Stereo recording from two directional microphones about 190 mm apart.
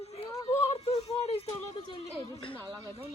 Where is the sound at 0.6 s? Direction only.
30° left (ahead or behind).